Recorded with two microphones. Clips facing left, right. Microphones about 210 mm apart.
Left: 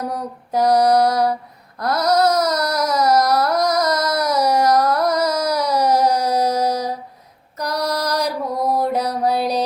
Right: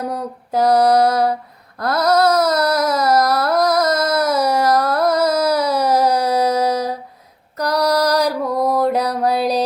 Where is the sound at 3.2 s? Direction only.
30° right (ahead or behind).